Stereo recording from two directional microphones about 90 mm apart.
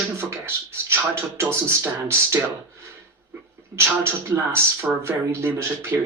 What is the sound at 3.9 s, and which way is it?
Speech, 30° right (ahead or behind).